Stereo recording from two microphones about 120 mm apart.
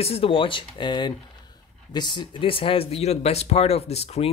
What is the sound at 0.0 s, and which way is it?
Speech, 55° left (ahead or behind).